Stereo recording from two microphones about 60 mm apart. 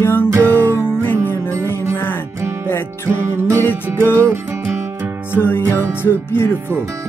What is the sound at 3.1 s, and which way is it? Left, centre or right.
Music, right.